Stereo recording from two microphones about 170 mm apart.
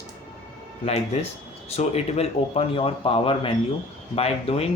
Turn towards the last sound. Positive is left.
turn(degrees=35)  # may be behind; listen again after turning